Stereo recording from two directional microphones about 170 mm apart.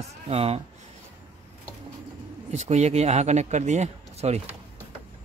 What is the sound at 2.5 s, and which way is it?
Speech, 40° right (ahead or behind).